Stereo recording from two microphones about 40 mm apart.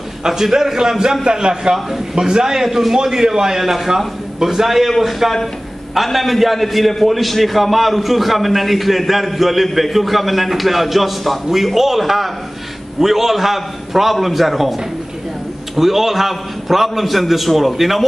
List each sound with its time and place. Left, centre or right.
0.2 s a man's voice: centre